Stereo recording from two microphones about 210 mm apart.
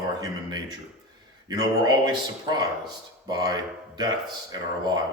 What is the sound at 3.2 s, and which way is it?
Speech, 20° right (ahead or behind).